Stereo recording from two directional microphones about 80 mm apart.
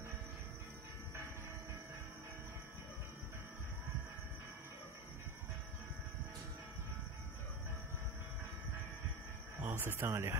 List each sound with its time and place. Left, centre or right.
9.7 s speech: right